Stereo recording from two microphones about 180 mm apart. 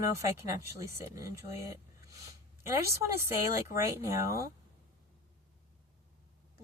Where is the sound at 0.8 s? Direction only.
15° right (ahead or behind).